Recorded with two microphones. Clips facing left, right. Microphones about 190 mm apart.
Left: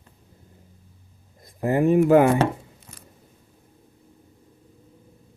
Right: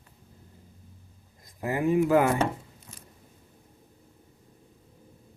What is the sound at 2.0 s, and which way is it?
Speech, 25° left (ahead or behind).